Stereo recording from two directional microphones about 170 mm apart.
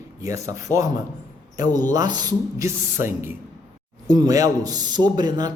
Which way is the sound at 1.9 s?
25° right (ahead or behind).